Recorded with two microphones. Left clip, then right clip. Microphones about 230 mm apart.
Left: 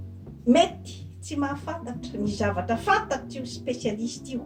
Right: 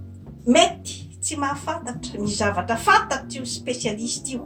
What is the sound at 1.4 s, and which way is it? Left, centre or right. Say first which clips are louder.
Speech: right 4 dB; centre.